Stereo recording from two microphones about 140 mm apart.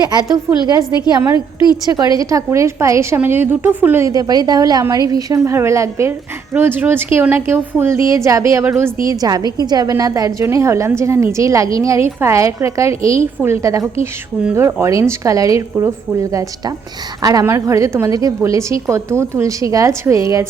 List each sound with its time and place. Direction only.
0.0 s a woman's voice: 30° right (ahead or behind)
2.1 s a woman's voice: 25° right (ahead or behind)
9.0 s a woman's voice: 30° right (ahead or behind)
17.2 s a woman's voice: 20° right (ahead or behind)